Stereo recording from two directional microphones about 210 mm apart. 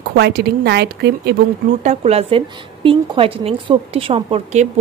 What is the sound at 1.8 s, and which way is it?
A woman's voice, 30° right (ahead or behind).